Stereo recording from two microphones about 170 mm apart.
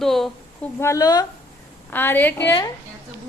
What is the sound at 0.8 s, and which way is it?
Speech, 20° left (ahead or behind).